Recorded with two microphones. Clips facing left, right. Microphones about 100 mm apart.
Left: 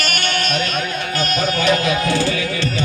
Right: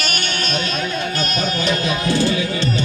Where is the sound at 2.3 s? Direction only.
20° right (ahead or behind).